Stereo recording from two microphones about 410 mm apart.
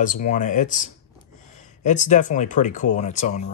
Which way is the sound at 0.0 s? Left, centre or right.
Centre.